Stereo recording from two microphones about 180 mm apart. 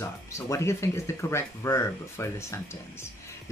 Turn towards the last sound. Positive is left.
turn(degrees=15)  # may be behind; listen again after turning